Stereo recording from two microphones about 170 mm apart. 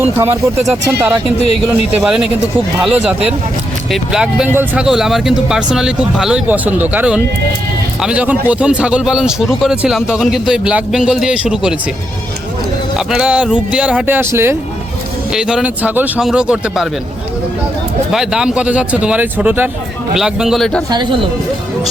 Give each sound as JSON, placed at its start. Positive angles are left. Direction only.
{"t": 0.0, "sound": "speech", "side_deg": -15}
{"t": 13.0, "sound": "speech", "side_deg": -5}
{"t": 15.3, "sound": "speech", "side_deg": -5}
{"t": 18.1, "sound": "speech", "side_deg": -5}
{"t": 20.9, "sound": "speech", "side_deg": -30}